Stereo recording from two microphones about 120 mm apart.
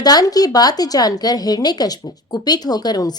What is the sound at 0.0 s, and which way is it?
Speech, 35° left (ahead or behind).